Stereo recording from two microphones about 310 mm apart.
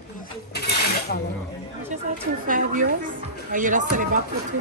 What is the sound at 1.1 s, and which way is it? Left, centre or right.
Speech, left.